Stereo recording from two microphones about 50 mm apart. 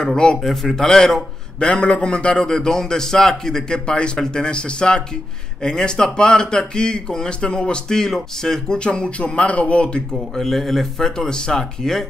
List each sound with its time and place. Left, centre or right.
0.0 s a man's voice: centre
0.4 s a man's voice: centre
10.1 s a man's voice: centre